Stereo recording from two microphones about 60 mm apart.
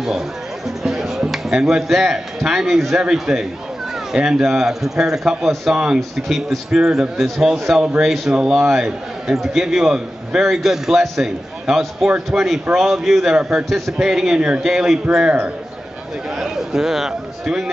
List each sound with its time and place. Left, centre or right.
0.8 s a man's voice: centre
13.3 s a man's voice: centre
13.7 s a man's voice: centre
15.2 s a man's voice: right
16.3 s a man's voice: centre